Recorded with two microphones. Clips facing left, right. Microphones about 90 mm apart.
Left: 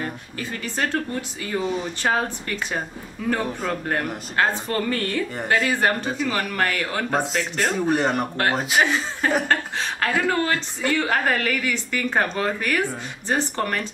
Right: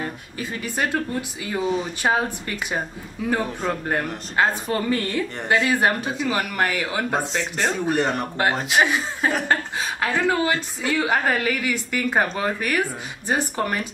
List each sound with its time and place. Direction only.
0.0 s a woman's voice: 15° right (ahead or behind)
3.4 s speech: centre (ahead or behind)
4.4 s a woman's voice: 15° right (ahead or behind); by 8.8 s centre (ahead or behind)
8.8 s a woman's voice: 15° right (ahead or behind)